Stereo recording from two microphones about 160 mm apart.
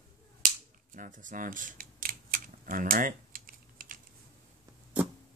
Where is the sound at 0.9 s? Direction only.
55° right (ahead or behind).